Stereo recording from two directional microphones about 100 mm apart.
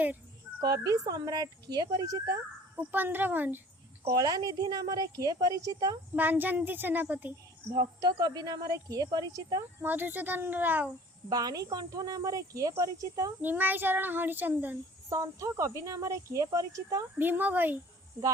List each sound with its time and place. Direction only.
0.6 s speech: 40° right (ahead or behind)
2.7 s a child's voice: 20° right (ahead or behind)
4.1 s speech: 40° right (ahead or behind)
6.1 s speech: 20° right (ahead or behind)
8.0 s speech: 40° right (ahead or behind)
9.8 s a child's voice: 20° right (ahead or behind)
11.3 s speech: 40° right (ahead or behind)
13.4 s a child's voice: 20° right (ahead or behind)
15.1 s speech: 35° right (ahead or behind)
17.2 s a child's voice: 20° right (ahead or behind)